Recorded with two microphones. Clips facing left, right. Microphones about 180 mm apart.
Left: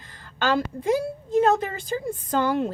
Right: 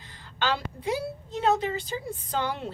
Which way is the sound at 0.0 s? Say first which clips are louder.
Left 4 dB; 50° left (ahead or behind).